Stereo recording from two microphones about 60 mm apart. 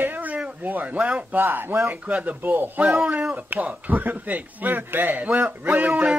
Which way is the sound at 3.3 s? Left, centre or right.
Right.